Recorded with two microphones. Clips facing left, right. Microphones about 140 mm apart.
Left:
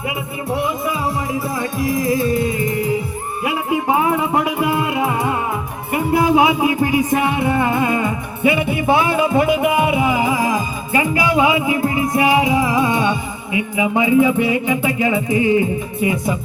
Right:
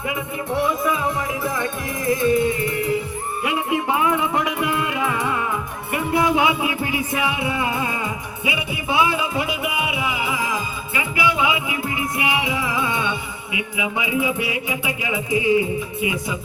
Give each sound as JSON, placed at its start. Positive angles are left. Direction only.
{"t": 0.6, "sound": "music", "side_deg": 25}
{"t": 3.4, "sound": "music", "side_deg": 35}
{"t": 15.4, "sound": "music", "side_deg": -15}
{"t": 16.0, "sound": "music", "side_deg": 45}